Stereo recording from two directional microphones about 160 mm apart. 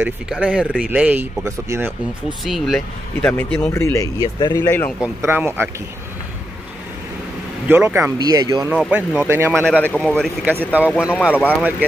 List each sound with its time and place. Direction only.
0.0 s speech: 10° right (ahead or behind)
2.4 s speech: centre (ahead or behind); by 4.6 s 25° left (ahead or behind)
4.6 s speech: 10° left (ahead or behind)
5.0 s speech: 15° right (ahead or behind)
7.6 s speech: 10° right (ahead or behind)
8.2 s speech: 25° right (ahead or behind)
8.6 s speech: 5° right (ahead or behind)
9.5 s speech: 5° left (ahead or behind)
10.4 s speech: 10° right (ahead or behind)